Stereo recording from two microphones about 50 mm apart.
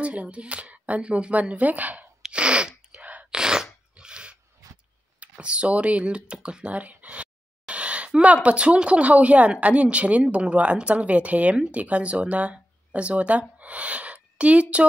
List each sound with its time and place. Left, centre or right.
0.0 s speech: right
2.3 s sneeze: right
3.3 s sneeze: centre
3.9 s a sound: right
5.4 s speech: right